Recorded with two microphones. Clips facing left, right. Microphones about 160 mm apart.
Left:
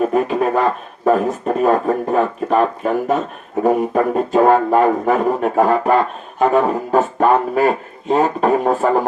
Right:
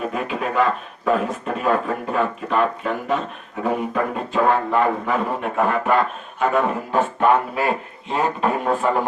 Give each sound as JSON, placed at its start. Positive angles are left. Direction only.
{"t": 0.1, "sound": "speech", "side_deg": 40}